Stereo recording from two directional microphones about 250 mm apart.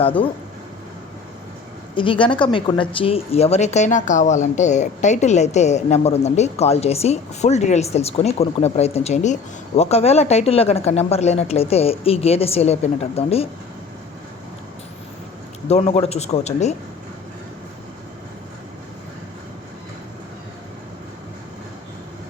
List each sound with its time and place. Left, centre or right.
0.0 s speech: left
2.0 s speech: centre
15.6 s speech: left